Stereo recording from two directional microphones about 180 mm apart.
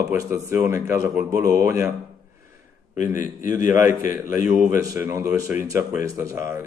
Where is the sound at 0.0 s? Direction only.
10° right (ahead or behind).